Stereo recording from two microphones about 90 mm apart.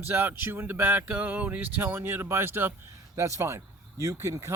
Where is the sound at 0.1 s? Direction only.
25° right (ahead or behind).